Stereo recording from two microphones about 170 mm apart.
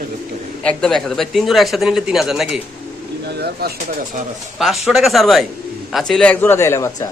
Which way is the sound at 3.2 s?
70° right (ahead or behind).